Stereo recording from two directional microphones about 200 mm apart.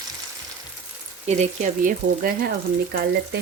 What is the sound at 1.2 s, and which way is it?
Speech, 35° right (ahead or behind).